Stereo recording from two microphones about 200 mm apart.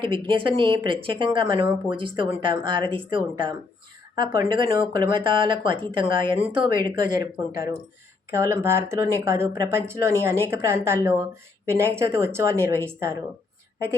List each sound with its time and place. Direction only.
0.0 s speech: 25° right (ahead or behind)
8.3 s speech: 15° right (ahead or behind)